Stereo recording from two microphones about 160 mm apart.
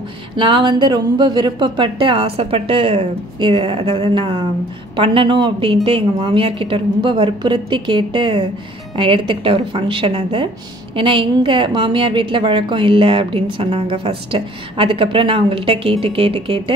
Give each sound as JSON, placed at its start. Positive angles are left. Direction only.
{"t": 0.4, "sound": "a woman's voice", "side_deg": -30}